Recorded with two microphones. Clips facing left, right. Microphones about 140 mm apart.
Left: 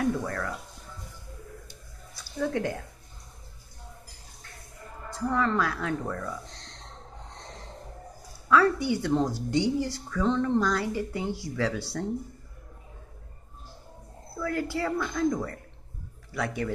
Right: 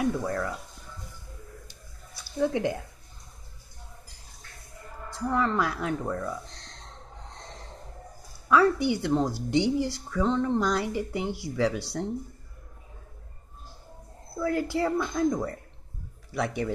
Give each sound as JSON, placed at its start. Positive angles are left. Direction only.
{"t": 0.0, "sound": "speech", "side_deg": -15}
{"t": 5.3, "sound": "speech", "side_deg": -15}
{"t": 8.5, "sound": "speech", "side_deg": -20}
{"t": 14.4, "sound": "a woman's voice", "side_deg": -20}